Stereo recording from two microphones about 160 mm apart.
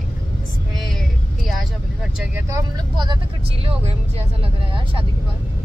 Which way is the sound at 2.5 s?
30° right (ahead or behind).